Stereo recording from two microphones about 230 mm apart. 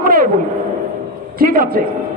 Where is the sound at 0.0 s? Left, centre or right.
Right.